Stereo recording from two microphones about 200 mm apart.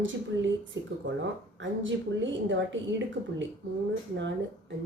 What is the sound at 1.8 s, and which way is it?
Speech, 70° right (ahead or behind).